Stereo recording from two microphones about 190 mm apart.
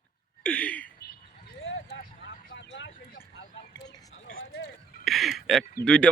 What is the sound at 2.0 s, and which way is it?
Vehicle, 65° left (ahead or behind).